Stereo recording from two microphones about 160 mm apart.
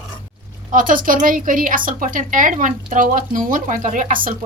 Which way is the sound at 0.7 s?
55° right (ahead or behind).